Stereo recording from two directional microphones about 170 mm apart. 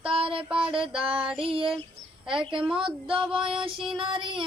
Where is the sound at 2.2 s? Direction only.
30° right (ahead or behind).